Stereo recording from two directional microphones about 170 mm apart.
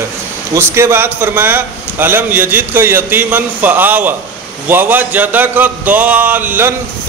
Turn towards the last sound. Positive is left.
turn(degrees=-10)  # may be behind; listen again after turning